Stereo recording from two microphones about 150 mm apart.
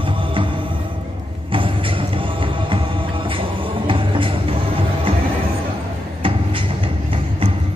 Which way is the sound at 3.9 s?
35° right (ahead or behind).